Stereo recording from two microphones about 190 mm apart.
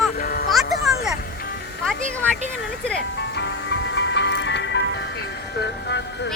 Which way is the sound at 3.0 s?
60° left (ahead or behind).